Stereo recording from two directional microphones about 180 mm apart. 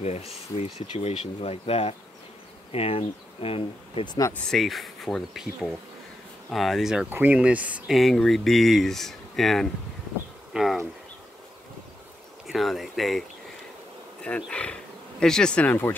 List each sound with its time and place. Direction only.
0.0 s speech: 35° left (ahead or behind)
4.3 s speech: centre (ahead or behind)
10.5 s a sound: centre (ahead or behind)
12.4 s speech: centre (ahead or behind)
14.2 s speech: 5° left (ahead or behind)